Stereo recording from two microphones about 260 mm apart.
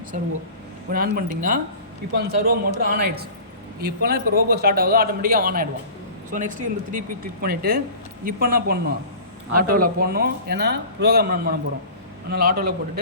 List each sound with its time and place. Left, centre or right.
0.1 s a man's voice: right